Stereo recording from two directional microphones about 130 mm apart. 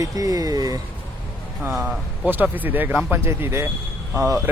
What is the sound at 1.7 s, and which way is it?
Speech, 10° right (ahead or behind).